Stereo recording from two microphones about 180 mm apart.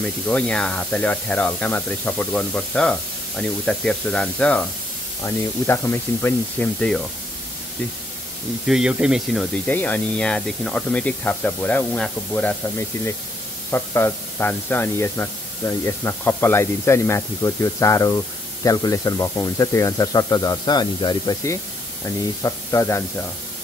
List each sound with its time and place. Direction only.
0.0 s speech: 5° left (ahead or behind)
8.6 s speech: 5° right (ahead or behind); by 23.2 s 15° left (ahead or behind)